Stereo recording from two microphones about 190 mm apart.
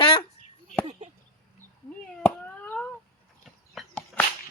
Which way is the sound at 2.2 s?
10° left (ahead or behind).